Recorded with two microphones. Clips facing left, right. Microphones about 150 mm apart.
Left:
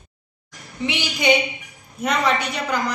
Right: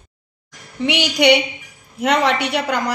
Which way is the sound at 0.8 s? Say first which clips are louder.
Right 5 dB; 75° right (ahead or behind).